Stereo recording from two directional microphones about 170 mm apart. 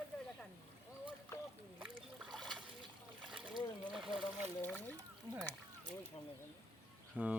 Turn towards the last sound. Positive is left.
turn(degrees=-10)  # may be behind; listen again after turning